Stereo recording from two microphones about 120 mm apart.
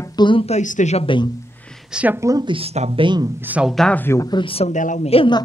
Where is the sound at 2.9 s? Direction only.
40° right (ahead or behind).